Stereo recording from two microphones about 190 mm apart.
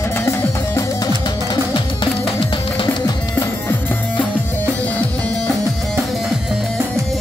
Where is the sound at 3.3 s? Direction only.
10° left (ahead or behind).